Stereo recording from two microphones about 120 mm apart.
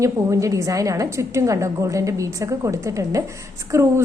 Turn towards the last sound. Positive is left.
turn(degrees=-25)  # may be behind; listen again after turning